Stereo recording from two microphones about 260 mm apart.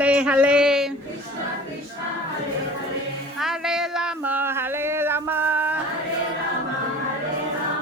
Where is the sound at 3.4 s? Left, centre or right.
Centre.